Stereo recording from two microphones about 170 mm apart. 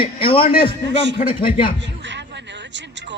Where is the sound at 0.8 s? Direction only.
90° right.